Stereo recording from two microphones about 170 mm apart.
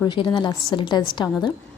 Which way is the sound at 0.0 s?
25° left (ahead or behind).